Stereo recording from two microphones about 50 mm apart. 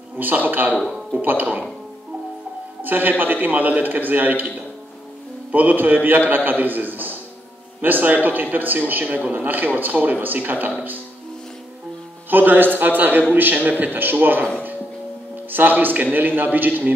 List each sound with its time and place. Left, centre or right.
0.2 s a man's voice: right
2.8 s a man's voice: right
9.0 s a man's voice: right
9.3 s a man's voice: right
12.3 s a man's voice: right
15.5 s a man's voice: right